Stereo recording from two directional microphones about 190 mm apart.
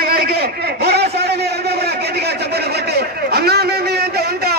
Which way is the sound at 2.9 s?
55° right (ahead or behind).